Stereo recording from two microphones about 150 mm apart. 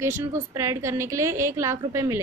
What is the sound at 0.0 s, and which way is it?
A woman's voice, 20° right (ahead or behind).